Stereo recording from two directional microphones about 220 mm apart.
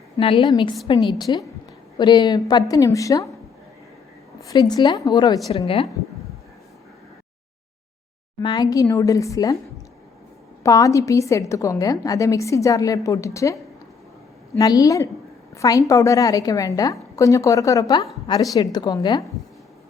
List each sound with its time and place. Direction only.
0.2 s a woman's voice: 25° left (ahead or behind)
4.4 s a woman's voice: 15° left (ahead or behind)
8.4 s a woman's voice: 20° left (ahead or behind)
10.6 s a woman's voice: 15° left (ahead or behind)